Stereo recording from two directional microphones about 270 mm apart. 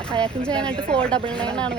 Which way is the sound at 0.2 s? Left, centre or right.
Centre.